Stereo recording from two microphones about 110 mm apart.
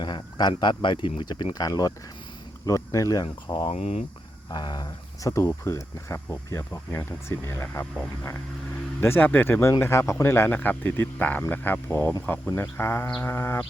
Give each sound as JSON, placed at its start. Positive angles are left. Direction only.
{"t": 0.0, "sound": "speech", "side_deg": 40}
{"t": 3.7, "sound": "speech", "side_deg": 75}
{"t": 4.5, "sound": "speech", "side_deg": 40}